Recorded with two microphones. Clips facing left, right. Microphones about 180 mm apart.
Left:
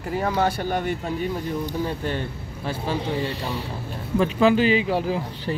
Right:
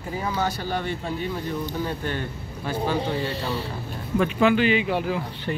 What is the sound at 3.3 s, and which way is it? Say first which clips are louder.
Speech: right 1 dB; 15° left (ahead or behind).